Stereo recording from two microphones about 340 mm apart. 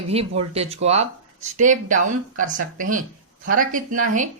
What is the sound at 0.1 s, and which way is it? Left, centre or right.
Speech, centre.